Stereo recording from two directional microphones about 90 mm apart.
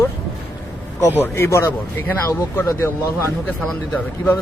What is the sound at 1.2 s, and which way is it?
Speech, 30° left (ahead or behind).